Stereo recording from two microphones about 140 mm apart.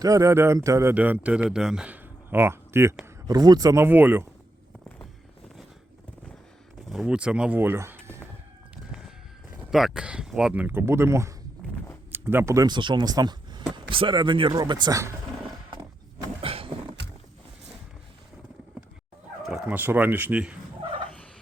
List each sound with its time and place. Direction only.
0.0 s speech: 25° right (ahead or behind)
3.2 s speech: 30° right (ahead or behind)
3.8 s speech: 15° right (ahead or behind)
6.9 s speech: 5° right (ahead or behind)
8.7 s chicken: 5° right (ahead or behind)
9.7 s speech: 5° right (ahead or behind); by 15.1 s 25° right (ahead or behind)
16.4 s a sound: 40° right (ahead or behind)
19.4 s speech: 5° right (ahead or behind)